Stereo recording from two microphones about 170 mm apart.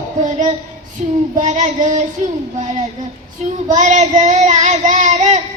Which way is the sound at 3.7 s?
45° right (ahead or behind).